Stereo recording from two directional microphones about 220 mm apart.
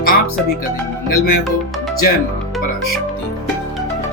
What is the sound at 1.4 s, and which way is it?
Speech, centre (ahead or behind).